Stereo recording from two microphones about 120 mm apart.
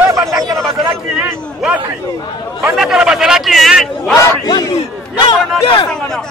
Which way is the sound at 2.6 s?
5° right (ahead or behind).